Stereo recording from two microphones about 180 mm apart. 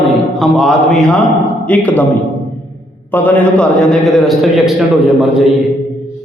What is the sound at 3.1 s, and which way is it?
A man's voice, 10° left (ahead or behind).